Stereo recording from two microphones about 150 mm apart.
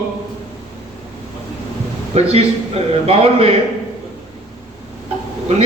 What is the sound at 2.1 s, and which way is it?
A man's voice, 45° right (ahead or behind).